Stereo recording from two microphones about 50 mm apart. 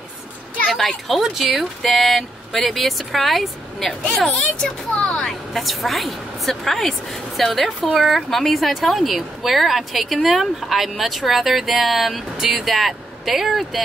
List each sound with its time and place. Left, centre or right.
0.7 s a woman's voice: centre
4.2 s speech: centre
5.2 s a woman's voice: centre